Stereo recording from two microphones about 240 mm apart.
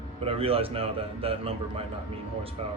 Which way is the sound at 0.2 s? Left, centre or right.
Right.